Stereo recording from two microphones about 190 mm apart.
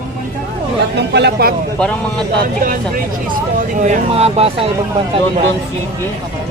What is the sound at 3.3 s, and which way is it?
Speech, 45° right (ahead or behind).